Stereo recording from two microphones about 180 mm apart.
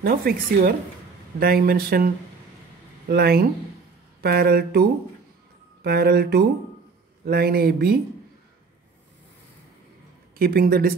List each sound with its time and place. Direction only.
0.0 s speech: 55° right (ahead or behind)
5.9 s speech: 60° right (ahead or behind)
10.3 s speech: 55° right (ahead or behind)